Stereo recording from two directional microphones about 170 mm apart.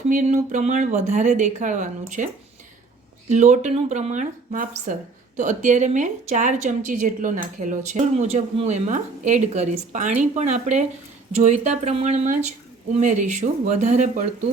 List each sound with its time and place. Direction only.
0.1 s a woman's voice: 50° right (ahead or behind)